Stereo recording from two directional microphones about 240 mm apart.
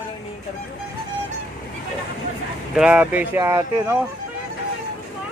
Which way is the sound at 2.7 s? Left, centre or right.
Centre.